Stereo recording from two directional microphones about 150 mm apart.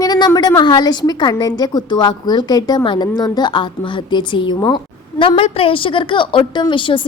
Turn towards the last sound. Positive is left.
turn(degrees=35)  # may be behind; listen again after turning